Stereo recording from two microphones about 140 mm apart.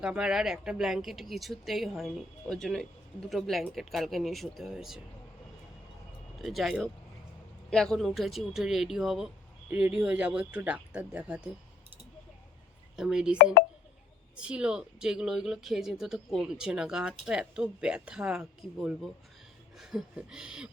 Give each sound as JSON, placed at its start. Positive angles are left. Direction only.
{"t": 0.0, "sound": "speech", "side_deg": -5}
{"t": 6.4, "sound": "speech", "side_deg": 0}
{"t": 13.0, "sound": "speech", "side_deg": -5}
{"t": 13.4, "sound": "speech", "side_deg": 90}
{"t": 14.3, "sound": "speech", "side_deg": -5}